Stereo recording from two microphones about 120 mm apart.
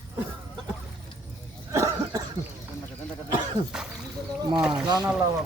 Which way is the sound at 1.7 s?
30° right (ahead or behind).